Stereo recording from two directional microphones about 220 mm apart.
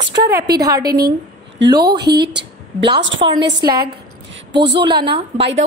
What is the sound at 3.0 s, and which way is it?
Speech, 55° right (ahead or behind).